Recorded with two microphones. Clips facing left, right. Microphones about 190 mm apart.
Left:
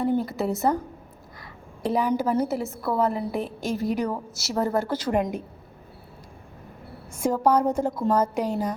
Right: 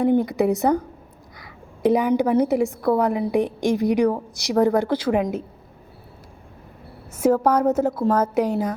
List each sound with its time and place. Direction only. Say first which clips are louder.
0.0 s a woman's voice: right 6 dB; 15° right (ahead or behind)
1.9 s a woman's voice: right 5 dB; 15° right (ahead or behind)
7.2 s a woman's voice: right 3 dB; 10° right (ahead or behind)